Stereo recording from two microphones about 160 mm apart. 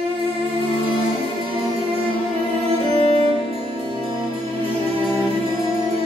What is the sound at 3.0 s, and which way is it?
Music, 35° left (ahead or behind).